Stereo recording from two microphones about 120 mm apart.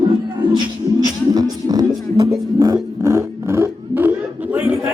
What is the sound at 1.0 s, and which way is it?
Music, 35° right (ahead or behind).